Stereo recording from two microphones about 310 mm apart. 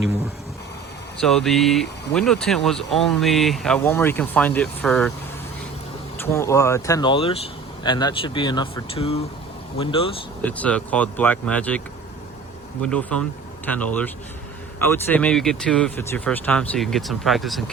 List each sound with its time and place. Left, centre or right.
1.2 s speech: centre
6.1 s speech: centre
10.4 s speech: centre
12.8 s speech: centre